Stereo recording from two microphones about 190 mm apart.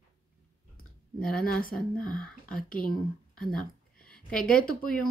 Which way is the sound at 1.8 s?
5° left (ahead or behind).